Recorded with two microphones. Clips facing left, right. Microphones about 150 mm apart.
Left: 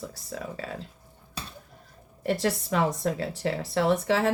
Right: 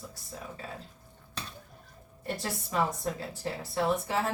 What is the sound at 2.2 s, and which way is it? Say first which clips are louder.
A woman's voice: left 9 dB; 85° left.